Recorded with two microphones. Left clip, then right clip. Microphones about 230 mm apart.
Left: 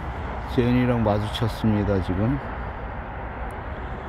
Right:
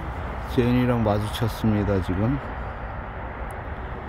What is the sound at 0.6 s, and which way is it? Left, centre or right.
Speech, centre.